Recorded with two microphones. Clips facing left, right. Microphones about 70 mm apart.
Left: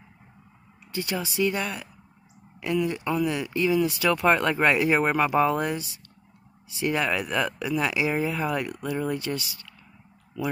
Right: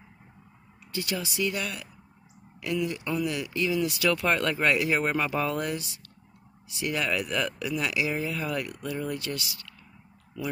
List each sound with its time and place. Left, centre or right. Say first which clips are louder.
0.9 s speech: left 3 dB; left
10.4 s speech: left 4 dB; centre